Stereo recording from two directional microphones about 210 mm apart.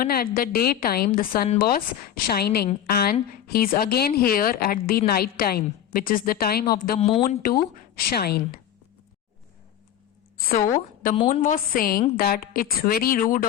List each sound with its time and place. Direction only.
0.0 s speech: 45° left (ahead or behind)
10.5 s a woman's voice: 40° left (ahead or behind)